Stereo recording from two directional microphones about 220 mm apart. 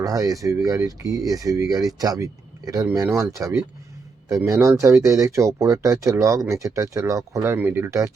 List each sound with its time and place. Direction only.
0.0 s speech: 15° right (ahead or behind)